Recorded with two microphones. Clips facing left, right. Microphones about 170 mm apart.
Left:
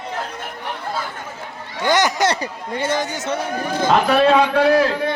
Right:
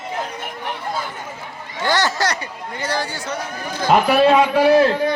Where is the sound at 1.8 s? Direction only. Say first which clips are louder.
Left 2 dB; 20° left (ahead or behind).